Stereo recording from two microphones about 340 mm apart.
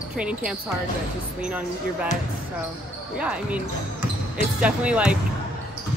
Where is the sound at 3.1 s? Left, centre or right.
Centre.